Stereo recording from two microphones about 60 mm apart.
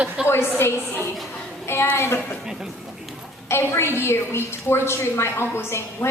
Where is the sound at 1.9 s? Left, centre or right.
Left.